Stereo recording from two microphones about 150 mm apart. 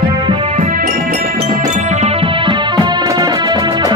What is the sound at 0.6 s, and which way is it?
Music, 65° right (ahead or behind).